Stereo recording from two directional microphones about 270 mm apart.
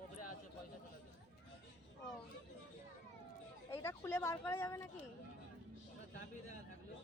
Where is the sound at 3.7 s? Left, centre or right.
Centre.